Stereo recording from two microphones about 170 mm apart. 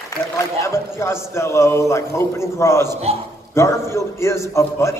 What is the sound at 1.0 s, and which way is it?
Mantra, 15° left (ahead or behind).